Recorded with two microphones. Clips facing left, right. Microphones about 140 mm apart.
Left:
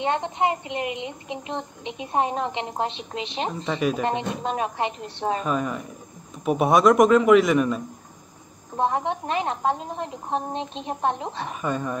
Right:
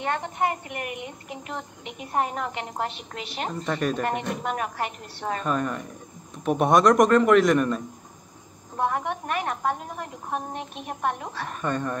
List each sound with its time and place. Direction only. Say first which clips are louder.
0.0 s a child's voice: left 3 dB; 20° left (ahead or behind)
5.4 s a man's voice: left 1 dB; 5° left (ahead or behind)
8.7 s a child's voice: left 3 dB; 25° left (ahead or behind)
11.4 s a man's voice: even; 5° left (ahead or behind)